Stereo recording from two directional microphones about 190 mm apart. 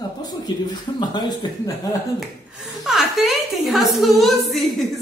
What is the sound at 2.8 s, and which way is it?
A woman's voice, centre (ahead or behind).